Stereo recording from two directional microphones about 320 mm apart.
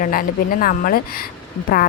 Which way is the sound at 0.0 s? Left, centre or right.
Left.